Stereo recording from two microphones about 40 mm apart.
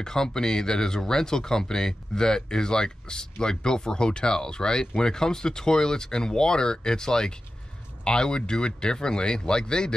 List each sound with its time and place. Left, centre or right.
0.0 s speech: centre